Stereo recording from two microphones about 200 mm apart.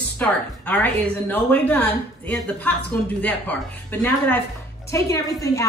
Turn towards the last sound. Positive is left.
turn(degrees=15)  # may be behind; listen again after turning